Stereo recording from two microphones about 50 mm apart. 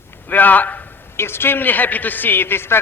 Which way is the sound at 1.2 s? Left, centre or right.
Left.